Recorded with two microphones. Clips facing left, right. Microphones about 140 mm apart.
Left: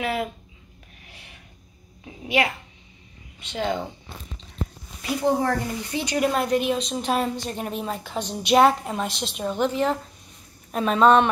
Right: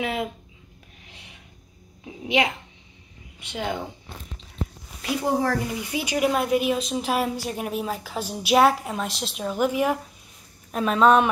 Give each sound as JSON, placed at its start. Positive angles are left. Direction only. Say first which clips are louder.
{"t": 0.0, "sound": "speech", "louder": "left 1 dB", "side_deg": -20}
{"t": 2.0, "sound": "a woman's voice", "louder": "even", "side_deg": -15}
{"t": 5.0, "sound": "a woman's voice", "louder": "left 1 dB", "side_deg": 0}